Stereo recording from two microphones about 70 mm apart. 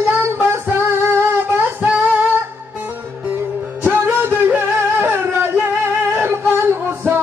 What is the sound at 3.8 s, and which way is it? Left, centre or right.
Music, right.